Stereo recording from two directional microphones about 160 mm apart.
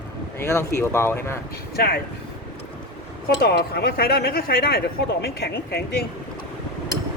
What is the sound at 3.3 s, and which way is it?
Speech, 70° left (ahead or behind).